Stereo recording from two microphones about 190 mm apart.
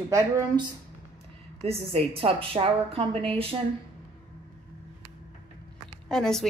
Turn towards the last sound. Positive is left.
turn(degrees=5)  # may be behind; listen again after turning